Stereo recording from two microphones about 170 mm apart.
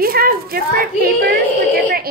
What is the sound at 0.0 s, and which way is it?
A woman's voice, 60° right (ahead or behind).